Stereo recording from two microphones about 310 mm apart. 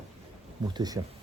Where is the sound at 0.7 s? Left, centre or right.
Centre.